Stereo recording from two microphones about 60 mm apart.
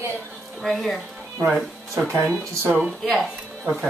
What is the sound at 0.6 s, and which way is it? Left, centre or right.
Speech, centre.